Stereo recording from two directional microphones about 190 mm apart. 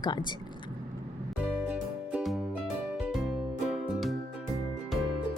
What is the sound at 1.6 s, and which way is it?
Music, 5° right (ahead or behind).